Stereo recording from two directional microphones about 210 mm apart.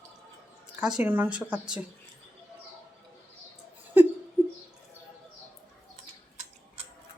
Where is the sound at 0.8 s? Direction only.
5° right (ahead or behind).